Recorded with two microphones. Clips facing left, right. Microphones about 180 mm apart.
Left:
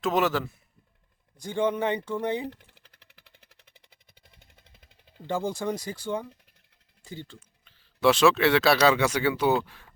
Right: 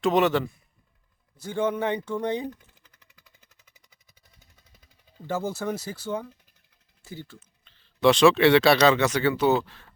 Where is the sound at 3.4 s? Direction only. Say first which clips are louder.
Left 3 dB; 60° left (ahead or behind).